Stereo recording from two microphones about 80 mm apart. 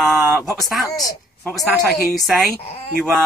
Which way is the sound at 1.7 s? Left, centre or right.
Centre.